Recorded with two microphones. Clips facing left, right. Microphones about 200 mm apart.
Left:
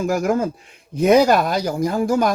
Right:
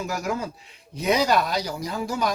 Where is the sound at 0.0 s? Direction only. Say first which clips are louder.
Left 9 dB; 50° left (ahead or behind).